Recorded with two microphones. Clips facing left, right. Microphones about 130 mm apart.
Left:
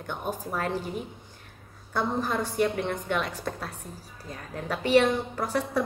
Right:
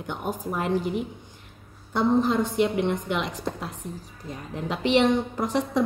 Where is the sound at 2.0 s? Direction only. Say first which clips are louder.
Right 6 dB; 20° right (ahead or behind).